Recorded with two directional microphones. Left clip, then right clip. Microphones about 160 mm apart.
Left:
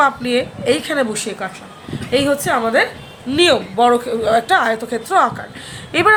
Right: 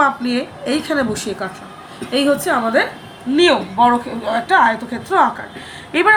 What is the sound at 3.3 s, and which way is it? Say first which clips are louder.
A woman's voice: even; 55° left (ahead or behind).